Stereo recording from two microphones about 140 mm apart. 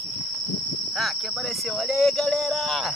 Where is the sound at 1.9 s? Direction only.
Centre (ahead or behind).